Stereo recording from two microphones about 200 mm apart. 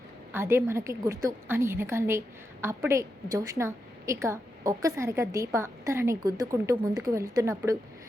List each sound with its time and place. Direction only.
0.3 s a woman's voice: 10° right (ahead or behind)